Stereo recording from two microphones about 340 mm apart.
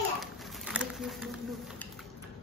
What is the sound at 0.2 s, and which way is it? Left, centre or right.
Patter, centre.